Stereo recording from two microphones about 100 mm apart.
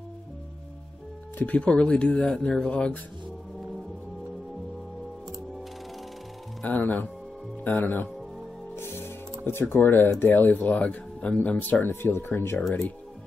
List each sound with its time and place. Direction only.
1.4 s speech: 10° left (ahead or behind)
6.6 s speech: 15° left (ahead or behind)
8.7 s music: 25° left (ahead or behind)
9.5 s speech: 25° left (ahead or behind)